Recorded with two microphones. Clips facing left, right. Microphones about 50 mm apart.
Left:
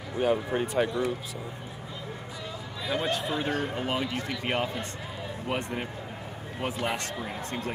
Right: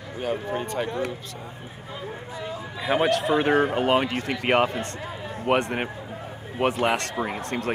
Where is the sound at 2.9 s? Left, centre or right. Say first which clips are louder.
Right 8 dB; right.